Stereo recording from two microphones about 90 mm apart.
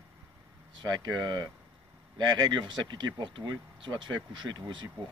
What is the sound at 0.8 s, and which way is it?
Speech, 50° right (ahead or behind).